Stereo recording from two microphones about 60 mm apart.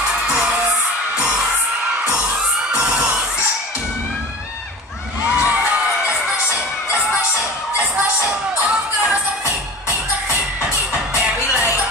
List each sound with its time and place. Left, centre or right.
0.3 s music: centre
2.7 s children shouting: centre
5.3 s a sound: right
5.7 s music: right